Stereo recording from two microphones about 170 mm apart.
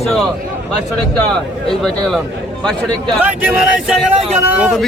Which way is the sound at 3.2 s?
10° right (ahead or behind).